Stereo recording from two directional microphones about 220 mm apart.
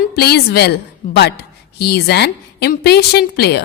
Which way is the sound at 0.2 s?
45° left (ahead or behind).